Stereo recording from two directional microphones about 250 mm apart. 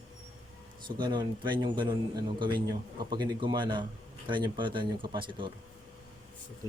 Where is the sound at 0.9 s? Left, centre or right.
Centre.